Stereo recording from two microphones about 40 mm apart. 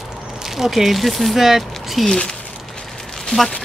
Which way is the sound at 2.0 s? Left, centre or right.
Centre.